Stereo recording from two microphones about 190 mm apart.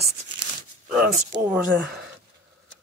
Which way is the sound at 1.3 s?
15° right (ahead or behind).